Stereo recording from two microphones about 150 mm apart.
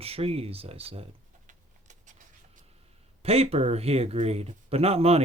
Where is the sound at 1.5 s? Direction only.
55° right (ahead or behind).